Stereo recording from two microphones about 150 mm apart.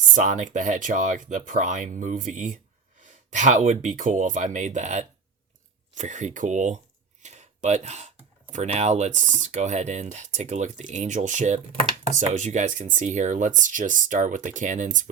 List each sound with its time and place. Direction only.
0.1 s speech: 55° right (ahead or behind)